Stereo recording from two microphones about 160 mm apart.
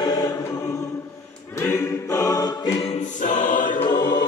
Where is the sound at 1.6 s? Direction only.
15° left (ahead or behind).